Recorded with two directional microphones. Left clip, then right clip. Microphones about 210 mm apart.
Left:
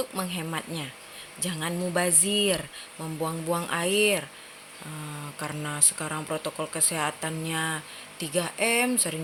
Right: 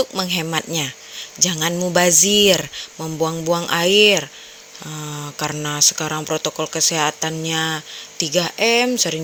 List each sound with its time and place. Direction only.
0.0 s speech: 35° right (ahead or behind)